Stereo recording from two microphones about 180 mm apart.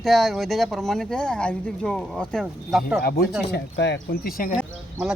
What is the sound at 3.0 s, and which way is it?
Speech, 60° left (ahead or behind).